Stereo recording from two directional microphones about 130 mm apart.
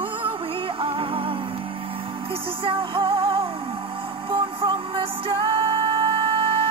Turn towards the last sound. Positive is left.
turn(degrees=-45)  # may be behind; listen again after turning